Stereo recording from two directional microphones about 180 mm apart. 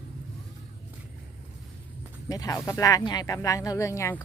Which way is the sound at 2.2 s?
20° left (ahead or behind).